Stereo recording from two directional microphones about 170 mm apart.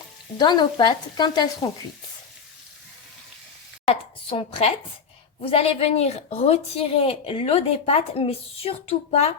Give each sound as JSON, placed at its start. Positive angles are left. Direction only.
{"t": 0.3, "sound": "speech", "side_deg": 25}
{"t": 3.8, "sound": "a woman's voice", "side_deg": 35}